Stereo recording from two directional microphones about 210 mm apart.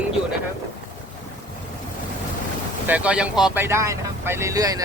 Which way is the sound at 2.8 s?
5° right (ahead or behind).